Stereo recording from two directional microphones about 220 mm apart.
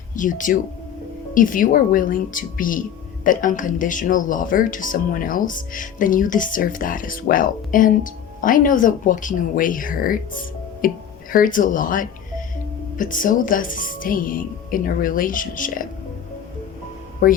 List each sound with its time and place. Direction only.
0.2 s speech: 35° left (ahead or behind)
17.2 s speech: 40° left (ahead or behind)